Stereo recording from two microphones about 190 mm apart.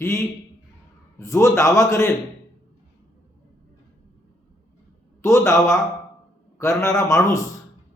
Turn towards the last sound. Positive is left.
turn(degrees=15)  # may be behind; listen again after turning